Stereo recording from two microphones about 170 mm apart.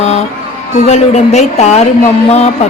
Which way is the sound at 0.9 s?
40° left (ahead or behind).